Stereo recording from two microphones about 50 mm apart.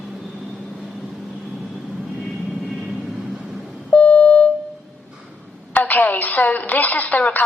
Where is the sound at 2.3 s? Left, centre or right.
Centre.